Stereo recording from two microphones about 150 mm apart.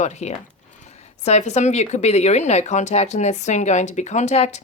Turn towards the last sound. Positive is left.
turn(degrees=50)  # may be behind; listen again after turning